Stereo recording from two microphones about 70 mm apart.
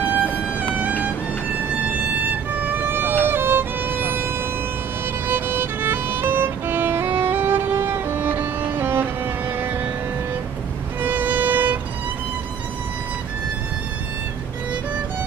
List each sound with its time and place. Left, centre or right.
0.0 s music: right
1.9 s violin: right
5.3 s violin: right
11.0 s violin: right